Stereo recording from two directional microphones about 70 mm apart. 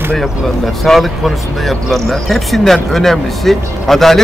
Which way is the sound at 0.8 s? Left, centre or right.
Centre.